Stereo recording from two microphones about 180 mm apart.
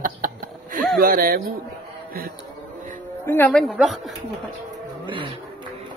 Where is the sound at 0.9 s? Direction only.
55° right (ahead or behind).